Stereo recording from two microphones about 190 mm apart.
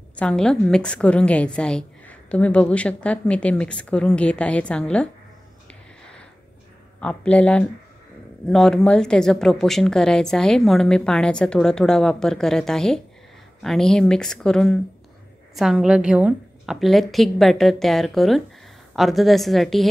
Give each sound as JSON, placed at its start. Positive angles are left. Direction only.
{"t": 0.2, "sound": "a woman's voice", "side_deg": 5}
{"t": 7.0, "sound": "a woman's voice", "side_deg": 5}